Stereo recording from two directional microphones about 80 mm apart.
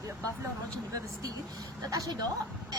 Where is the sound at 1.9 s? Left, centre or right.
Right.